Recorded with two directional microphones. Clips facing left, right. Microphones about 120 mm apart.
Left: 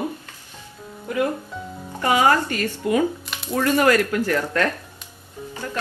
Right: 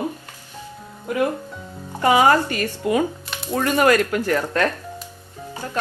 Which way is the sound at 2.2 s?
20° right (ahead or behind).